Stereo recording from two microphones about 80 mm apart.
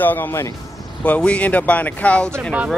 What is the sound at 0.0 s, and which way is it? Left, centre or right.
Speech, left.